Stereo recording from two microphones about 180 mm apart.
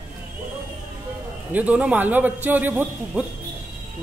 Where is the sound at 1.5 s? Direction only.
10° right (ahead or behind).